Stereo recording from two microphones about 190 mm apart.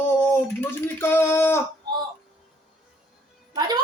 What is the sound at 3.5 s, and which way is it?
Speech, 20° right (ahead or behind).